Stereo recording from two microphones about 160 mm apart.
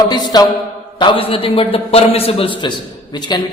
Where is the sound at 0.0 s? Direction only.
25° left (ahead or behind).